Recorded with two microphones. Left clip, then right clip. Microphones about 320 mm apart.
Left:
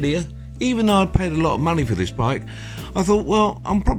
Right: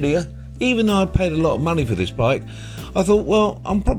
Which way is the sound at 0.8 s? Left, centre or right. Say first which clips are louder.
Left 3 dB; centre.